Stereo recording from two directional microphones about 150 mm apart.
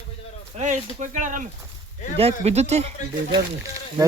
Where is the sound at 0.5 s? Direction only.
55° right (ahead or behind).